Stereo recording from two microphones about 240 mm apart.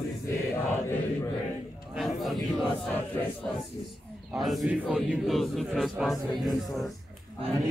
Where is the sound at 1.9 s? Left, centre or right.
Centre.